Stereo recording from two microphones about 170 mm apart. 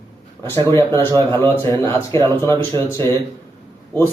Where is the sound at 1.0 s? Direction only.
15° left (ahead or behind).